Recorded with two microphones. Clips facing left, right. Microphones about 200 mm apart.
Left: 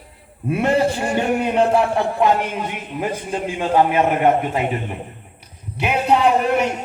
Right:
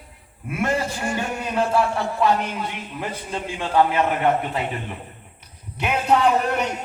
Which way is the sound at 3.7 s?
20° left (ahead or behind).